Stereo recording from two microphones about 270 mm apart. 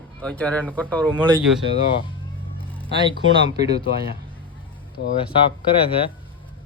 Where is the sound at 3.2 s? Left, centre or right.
Right.